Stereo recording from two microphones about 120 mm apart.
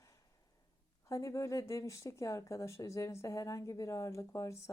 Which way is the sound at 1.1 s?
25° left (ahead or behind).